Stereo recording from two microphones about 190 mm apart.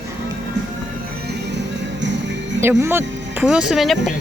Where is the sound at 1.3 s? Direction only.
65° right (ahead or behind).